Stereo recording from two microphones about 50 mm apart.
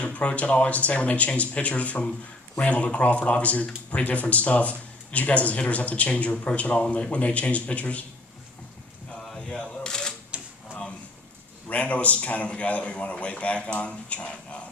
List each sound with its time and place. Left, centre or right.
0.0 s speech: left
9.2 s a sound: centre
9.6 s camera: centre
11.7 s speech: left